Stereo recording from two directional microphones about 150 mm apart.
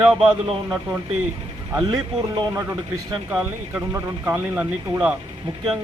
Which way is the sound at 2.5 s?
15° right (ahead or behind).